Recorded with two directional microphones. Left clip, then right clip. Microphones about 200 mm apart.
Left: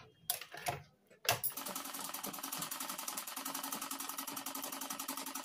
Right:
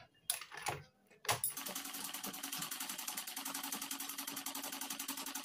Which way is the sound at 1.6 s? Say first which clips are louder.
Left 1 dB; centre (ahead or behind).